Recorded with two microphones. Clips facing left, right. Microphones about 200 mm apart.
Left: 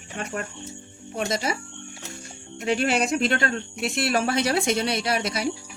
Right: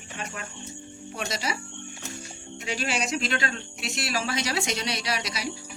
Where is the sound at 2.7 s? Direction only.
55° left (ahead or behind).